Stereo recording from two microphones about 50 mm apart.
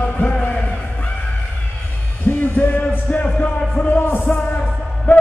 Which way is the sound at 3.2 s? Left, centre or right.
Left.